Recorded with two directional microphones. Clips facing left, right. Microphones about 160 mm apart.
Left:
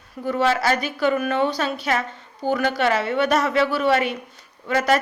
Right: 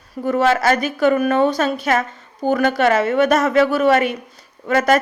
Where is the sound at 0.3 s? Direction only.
50° right (ahead or behind).